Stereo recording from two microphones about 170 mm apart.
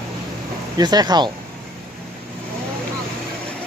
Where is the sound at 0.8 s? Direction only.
25° right (ahead or behind).